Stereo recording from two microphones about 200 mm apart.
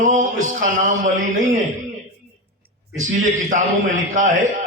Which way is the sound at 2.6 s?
40° right (ahead or behind).